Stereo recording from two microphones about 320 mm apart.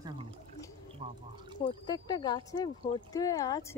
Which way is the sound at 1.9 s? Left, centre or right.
Centre.